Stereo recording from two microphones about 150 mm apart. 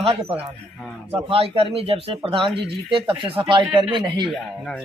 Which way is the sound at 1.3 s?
40° right (ahead or behind).